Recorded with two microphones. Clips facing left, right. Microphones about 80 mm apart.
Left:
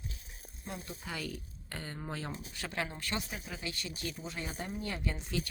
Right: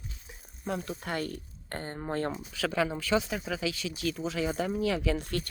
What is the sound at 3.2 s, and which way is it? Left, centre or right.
Speech, right.